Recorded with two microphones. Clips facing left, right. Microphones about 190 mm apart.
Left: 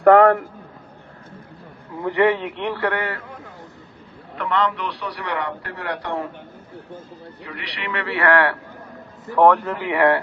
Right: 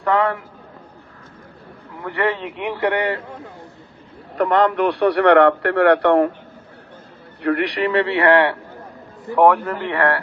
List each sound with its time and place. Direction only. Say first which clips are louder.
0.0 s a man's voice: left 7 dB; 50° left (ahead or behind)
2.0 s a man's voice: left 4 dB; 15° left (ahead or behind)
2.6 s a man's voice: right 3 dB; 15° right (ahead or behind)
4.4 s a man's voice: right 6 dB; 45° right (ahead or behind)
7.4 s a man's voice: right 14 dB; 55° right (ahead or behind); by 8.5 s 25° right (ahead or behind)
9.3 s a man's voice: right 1 dB; 10° right (ahead or behind)
9.6 s speech: even; 5° left (ahead or behind)